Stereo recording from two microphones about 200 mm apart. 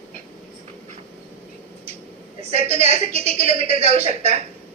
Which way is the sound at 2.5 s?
30° right (ahead or behind).